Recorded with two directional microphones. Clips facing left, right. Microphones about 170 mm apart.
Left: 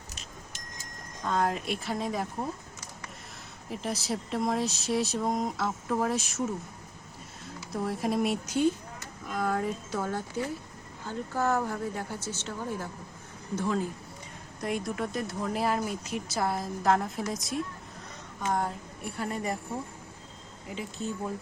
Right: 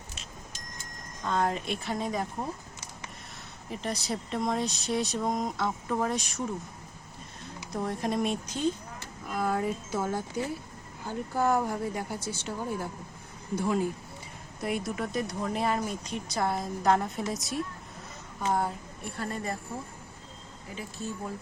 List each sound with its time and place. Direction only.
1.2 s speech: centre (ahead or behind)
3.7 s speech: 5° left (ahead or behind)
7.7 s speech: 5° left (ahead or behind)
9.2 s a woman's voice: 5° right (ahead or behind)
19.1 s speech: 15° left (ahead or behind)
20.7 s speech: 20° left (ahead or behind)